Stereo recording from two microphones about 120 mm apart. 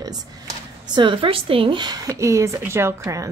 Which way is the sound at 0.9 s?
45° right (ahead or behind).